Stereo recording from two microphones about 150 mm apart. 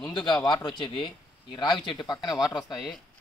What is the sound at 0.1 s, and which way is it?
A man's voice, 30° left (ahead or behind).